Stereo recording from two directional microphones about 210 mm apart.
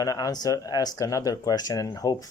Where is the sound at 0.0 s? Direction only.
15° left (ahead or behind).